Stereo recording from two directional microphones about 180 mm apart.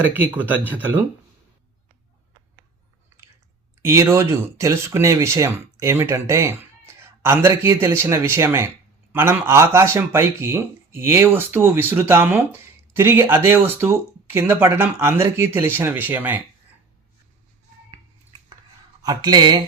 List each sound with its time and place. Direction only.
0.0 s a man's voice: 10° right (ahead or behind)
3.1 s chewing: 15° right (ahead or behind)
3.8 s a man's voice: 15° right (ahead or behind)
19.0 s speech: 25° right (ahead or behind)